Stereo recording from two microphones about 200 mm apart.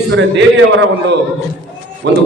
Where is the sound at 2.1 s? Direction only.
60° right (ahead or behind).